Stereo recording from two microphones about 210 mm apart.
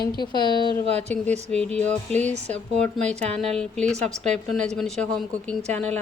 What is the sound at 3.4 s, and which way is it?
Music, 5° left (ahead or behind).